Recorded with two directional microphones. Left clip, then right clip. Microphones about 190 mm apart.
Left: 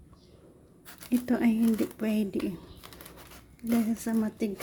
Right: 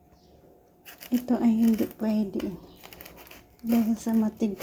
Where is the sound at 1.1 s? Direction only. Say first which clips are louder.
Right 2 dB; 10° left (ahead or behind).